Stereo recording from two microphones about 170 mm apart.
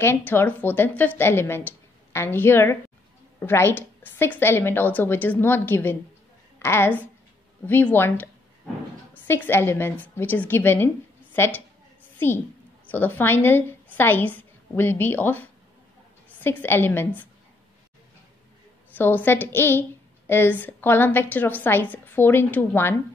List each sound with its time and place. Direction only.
0.0 s a woman's voice: 15° left (ahead or behind)
9.3 s a woman's voice: 15° left (ahead or behind)
12.9 s a woman's voice: 10° left (ahead or behind)
18.9 s a woman's voice: 10° left (ahead or behind)